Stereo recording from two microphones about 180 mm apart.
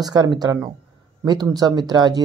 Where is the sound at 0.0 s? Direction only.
20° right (ahead or behind).